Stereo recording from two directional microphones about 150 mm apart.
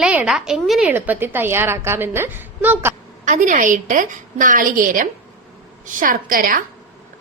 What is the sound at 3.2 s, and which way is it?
A woman's voice, 55° right (ahead or behind).